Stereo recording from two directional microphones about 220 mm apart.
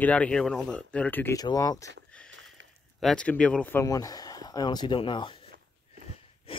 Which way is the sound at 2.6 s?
55° right (ahead or behind).